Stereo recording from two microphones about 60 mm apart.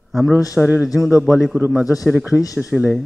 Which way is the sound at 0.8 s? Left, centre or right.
Centre.